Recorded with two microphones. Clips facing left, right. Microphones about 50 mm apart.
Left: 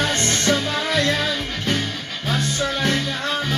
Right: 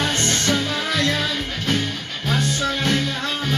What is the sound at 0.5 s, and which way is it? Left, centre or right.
Music, left.